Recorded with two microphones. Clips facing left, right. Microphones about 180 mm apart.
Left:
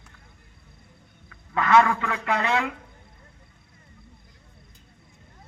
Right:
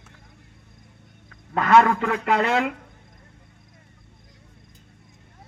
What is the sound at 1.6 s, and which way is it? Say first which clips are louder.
Speech: right 2 dB; 45° right (ahead or behind).